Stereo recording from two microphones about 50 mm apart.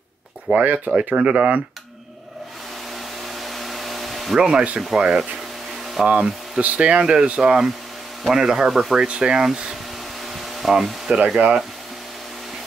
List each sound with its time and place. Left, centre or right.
0.5 s speech: right
3.3 s a sound: centre
4.4 s speech: centre
6.0 s speech: right; by 11.1 s centre
11.4 s speech: right